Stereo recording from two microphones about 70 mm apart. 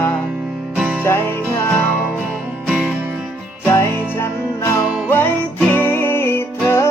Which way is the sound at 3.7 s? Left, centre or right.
Left.